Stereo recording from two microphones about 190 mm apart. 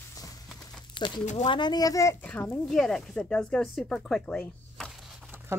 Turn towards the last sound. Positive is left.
turn(degrees=0)  # may be behind; listen again after turning